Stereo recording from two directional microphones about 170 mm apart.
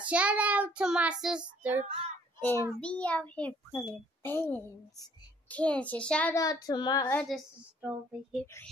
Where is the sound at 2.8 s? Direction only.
5° left (ahead or behind).